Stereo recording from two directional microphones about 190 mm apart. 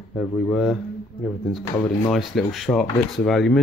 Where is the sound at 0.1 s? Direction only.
5° left (ahead or behind).